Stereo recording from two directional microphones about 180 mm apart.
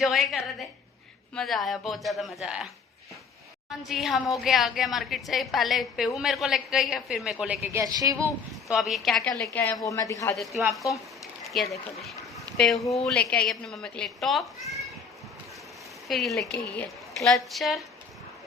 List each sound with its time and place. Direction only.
0.0 s a man's voice: centre (ahead or behind)
3.7 s a man's voice: centre (ahead or behind); by 8.3 s 15° right (ahead or behind)
8.7 s a man's voice: centre (ahead or behind); by 10.3 s 15° left (ahead or behind)
10.3 s a man's voice: centre (ahead or behind)
16.0 s a man's voice: centre (ahead or behind)